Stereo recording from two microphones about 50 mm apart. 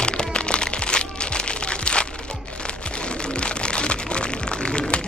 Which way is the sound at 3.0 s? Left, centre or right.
Centre.